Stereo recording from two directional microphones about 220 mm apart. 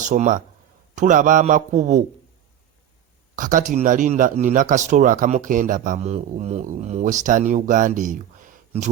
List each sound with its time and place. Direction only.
0.0 s speech: 35° right (ahead or behind)
3.3 s speech: 35° right (ahead or behind)